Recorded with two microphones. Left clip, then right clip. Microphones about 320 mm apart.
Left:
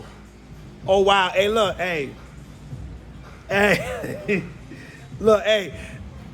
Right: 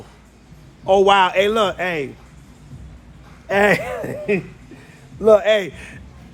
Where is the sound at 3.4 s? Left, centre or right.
Right.